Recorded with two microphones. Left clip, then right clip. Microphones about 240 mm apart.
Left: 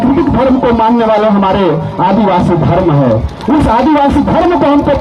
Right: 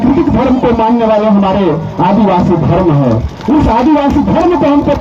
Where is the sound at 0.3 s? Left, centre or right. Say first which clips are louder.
Left 1 dB; left.